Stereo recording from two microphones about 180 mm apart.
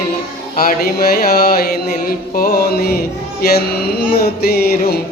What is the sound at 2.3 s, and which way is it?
Mantra, 60° left (ahead or behind).